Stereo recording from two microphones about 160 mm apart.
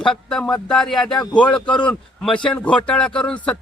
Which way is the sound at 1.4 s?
5° left (ahead or behind).